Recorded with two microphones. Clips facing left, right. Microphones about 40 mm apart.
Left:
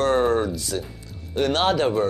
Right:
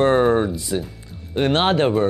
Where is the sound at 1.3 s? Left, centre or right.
Right.